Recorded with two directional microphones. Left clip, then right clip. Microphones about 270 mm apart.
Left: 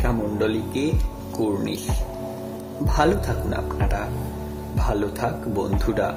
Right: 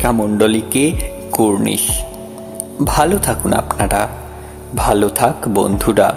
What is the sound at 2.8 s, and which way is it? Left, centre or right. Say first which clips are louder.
Speech: right 7 dB; right.